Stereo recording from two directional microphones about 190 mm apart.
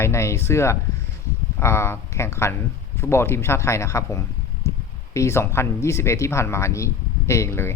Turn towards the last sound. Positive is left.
turn(degrees=15)  # may be behind; listen again after turning